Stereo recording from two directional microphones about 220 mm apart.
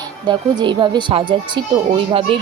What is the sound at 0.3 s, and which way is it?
A woman's voice, 20° right (ahead or behind).